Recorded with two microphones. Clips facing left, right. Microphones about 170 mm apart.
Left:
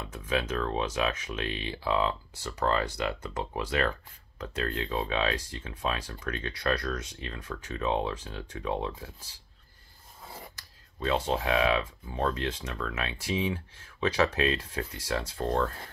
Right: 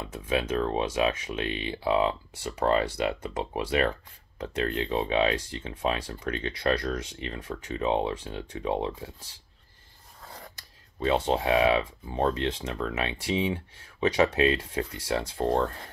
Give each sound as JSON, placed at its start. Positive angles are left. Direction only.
{"t": 0.3, "sound": "speech", "side_deg": -20}
{"t": 11.1, "sound": "speech", "side_deg": -25}